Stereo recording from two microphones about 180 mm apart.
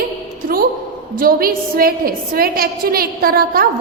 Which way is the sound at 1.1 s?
55° right (ahead or behind).